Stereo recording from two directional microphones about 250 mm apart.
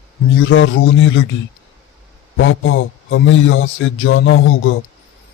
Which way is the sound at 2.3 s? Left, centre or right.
Left.